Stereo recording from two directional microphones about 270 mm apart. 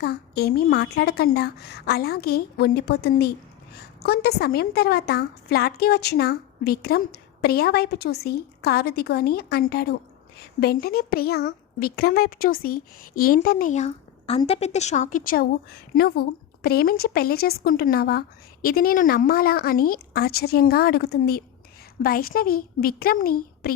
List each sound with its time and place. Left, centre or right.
0.0 s a woman's voice: left